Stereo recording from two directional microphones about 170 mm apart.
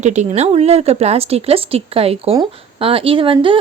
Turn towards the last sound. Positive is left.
turn(degrees=-30)  # may be behind; listen again after turning